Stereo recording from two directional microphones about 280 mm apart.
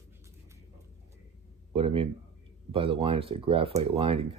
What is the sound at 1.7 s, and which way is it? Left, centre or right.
Speech, centre.